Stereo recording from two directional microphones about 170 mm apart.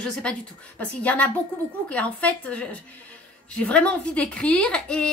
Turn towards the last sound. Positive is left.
turn(degrees=5)  # may be behind; listen again after turning